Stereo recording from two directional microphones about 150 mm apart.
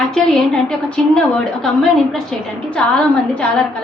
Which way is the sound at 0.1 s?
5° left (ahead or behind).